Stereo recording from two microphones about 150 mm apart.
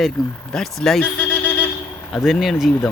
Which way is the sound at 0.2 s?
Centre (ahead or behind).